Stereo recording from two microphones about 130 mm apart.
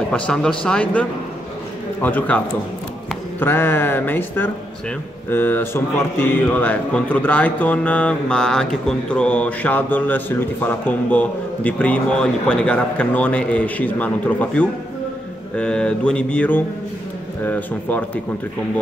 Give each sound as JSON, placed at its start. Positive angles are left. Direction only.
{"t": 0.1, "sound": "speech", "side_deg": 5}